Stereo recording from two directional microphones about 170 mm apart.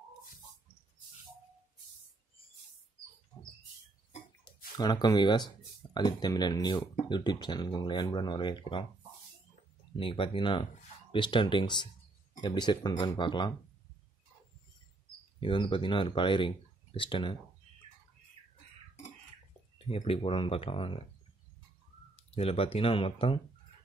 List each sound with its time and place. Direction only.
4.7 s speech: 25° left (ahead or behind)
9.9 s speech: 30° left (ahead or behind)
15.4 s speech: 30° left (ahead or behind)
19.9 s speech: 35° left (ahead or behind)
22.1 s speech: 35° left (ahead or behind)